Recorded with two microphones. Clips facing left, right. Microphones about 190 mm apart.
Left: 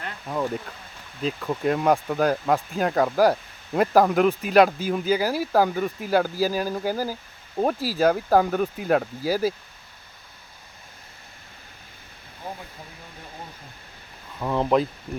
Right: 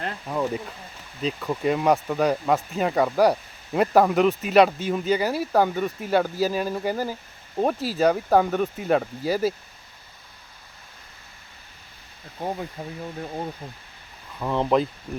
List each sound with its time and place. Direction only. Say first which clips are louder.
0.3 s speech: even; centre (ahead or behind)
12.8 s speech: right 9 dB; 60° right (ahead or behind)
14.3 s speech: even; centre (ahead or behind)